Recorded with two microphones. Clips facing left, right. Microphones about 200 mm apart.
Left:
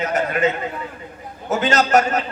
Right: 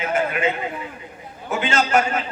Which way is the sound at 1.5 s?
40° left (ahead or behind).